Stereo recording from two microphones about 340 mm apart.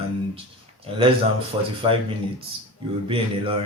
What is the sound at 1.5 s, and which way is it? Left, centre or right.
Speech, centre.